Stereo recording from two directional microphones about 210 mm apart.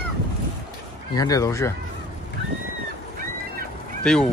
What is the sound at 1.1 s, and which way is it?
Speech, 15° left (ahead or behind).